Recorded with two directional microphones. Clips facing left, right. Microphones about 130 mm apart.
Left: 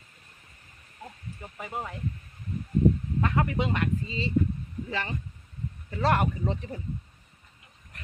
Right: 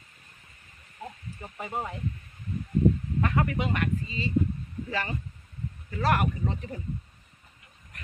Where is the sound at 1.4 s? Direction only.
5° right (ahead or behind).